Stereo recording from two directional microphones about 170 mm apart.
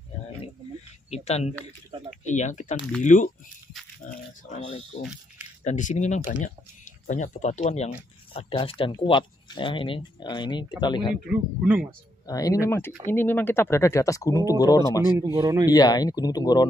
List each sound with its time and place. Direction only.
1.1 s speech: 40° left (ahead or behind)
4.5 s speech: 40° left (ahead or behind)
11.2 s speech: 5° right (ahead or behind)
12.3 s speech: 20° left (ahead or behind)
15.3 s speech: 20° right (ahead or behind)
15.7 s speech: 25° left (ahead or behind)